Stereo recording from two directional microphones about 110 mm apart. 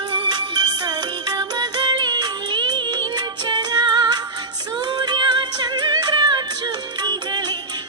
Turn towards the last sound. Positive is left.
turn(degrees=-40)  # may be behind; listen again after turning